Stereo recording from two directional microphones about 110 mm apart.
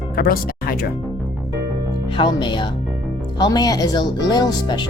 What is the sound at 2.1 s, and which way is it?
Speech, 45° left (ahead or behind).